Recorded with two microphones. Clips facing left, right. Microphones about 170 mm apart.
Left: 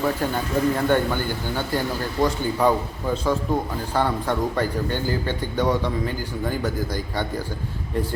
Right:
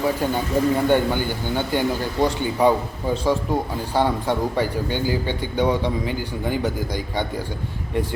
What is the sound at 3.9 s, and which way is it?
A man's voice, 15° right (ahead or behind).